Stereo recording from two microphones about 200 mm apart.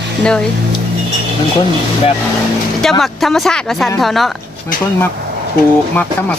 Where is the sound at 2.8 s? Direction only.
Centre (ahead or behind).